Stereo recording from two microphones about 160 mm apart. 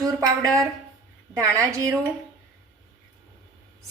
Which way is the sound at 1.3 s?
20° right (ahead or behind).